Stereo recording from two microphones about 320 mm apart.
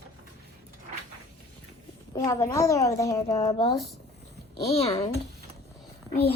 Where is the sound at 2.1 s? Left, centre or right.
Centre.